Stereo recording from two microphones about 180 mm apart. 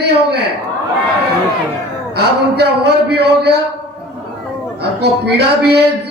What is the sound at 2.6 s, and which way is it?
Speech, 65° right (ahead or behind).